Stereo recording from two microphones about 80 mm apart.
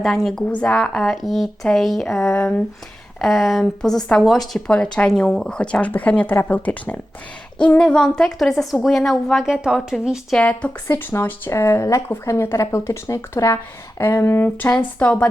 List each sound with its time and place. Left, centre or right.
0.0 s a woman's voice: centre
0.4 s speech: centre
0.8 s a woman's voice: centre
3.2 s a woman's voice: centre
4.7 s speech: centre
7.8 s a woman's voice: centre
10.8 s speech: left; by 15.3 s centre